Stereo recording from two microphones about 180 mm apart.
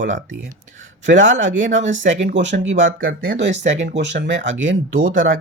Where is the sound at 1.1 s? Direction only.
90° right.